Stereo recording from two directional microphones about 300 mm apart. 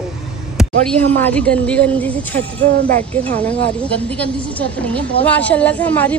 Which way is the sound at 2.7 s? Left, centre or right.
Right.